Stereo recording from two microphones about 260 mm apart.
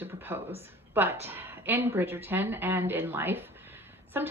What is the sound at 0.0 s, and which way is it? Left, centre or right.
A woman's voice, centre.